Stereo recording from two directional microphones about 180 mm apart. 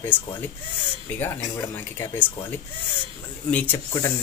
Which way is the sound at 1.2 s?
10° left (ahead or behind).